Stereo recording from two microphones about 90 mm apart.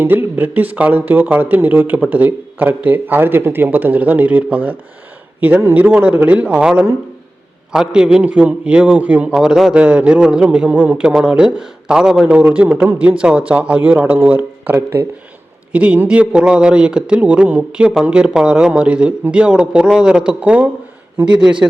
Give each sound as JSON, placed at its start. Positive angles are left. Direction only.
{"t": 0.0, "sound": "speech", "side_deg": -20}
{"t": 9.3, "sound": "a man's voice", "side_deg": -5}